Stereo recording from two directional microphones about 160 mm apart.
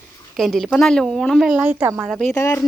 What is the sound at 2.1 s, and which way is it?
Speech, 10° left (ahead or behind).